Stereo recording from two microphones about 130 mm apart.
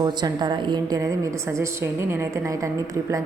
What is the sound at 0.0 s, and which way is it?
A woman's voice, 35° right (ahead or behind).